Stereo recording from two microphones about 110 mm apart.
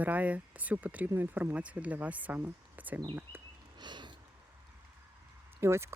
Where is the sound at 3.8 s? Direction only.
45° right (ahead or behind).